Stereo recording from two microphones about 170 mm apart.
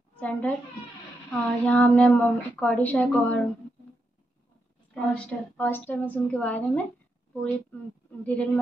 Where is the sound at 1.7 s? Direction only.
10° left (ahead or behind).